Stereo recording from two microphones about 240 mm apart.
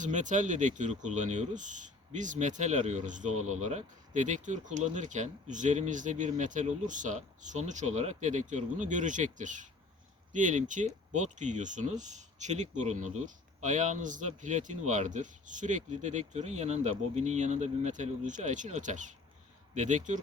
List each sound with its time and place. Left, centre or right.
0.0 s speech: right
3.2 s speech: right
3.6 s speech: right